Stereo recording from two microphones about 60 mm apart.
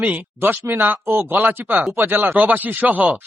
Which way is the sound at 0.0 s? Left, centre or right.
Right.